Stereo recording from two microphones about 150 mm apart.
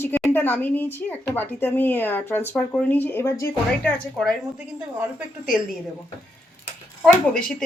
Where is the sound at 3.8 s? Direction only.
5° left (ahead or behind).